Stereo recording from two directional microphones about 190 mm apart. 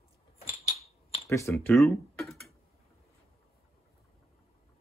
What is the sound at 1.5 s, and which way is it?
Speech, centre (ahead or behind).